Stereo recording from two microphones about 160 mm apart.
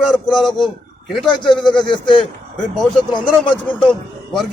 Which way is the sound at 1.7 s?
5° left (ahead or behind).